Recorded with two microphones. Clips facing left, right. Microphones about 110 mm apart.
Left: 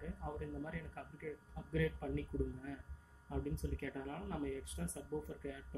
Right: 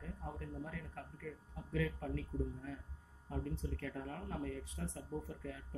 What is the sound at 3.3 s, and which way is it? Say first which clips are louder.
Speech: left 1 dB; 5° left (ahead or behind).